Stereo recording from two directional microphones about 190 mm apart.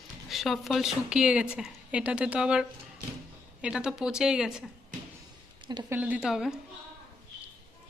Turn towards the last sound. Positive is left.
turn(degrees=-5)  # may be behind; listen again after turning